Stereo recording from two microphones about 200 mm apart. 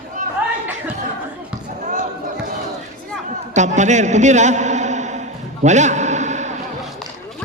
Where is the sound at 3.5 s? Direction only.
35° right (ahead or behind).